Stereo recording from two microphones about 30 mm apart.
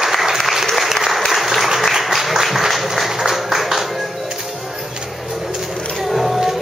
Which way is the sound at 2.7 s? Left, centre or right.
Centre.